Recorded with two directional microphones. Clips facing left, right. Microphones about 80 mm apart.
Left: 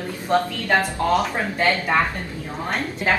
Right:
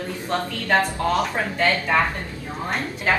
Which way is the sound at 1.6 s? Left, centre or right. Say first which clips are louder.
Left 1 dB; left.